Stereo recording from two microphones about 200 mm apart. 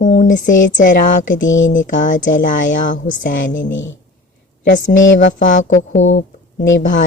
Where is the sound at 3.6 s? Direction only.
70° left (ahead or behind).